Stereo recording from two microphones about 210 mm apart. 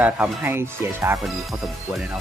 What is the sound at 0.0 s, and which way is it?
Speech, 10° right (ahead or behind).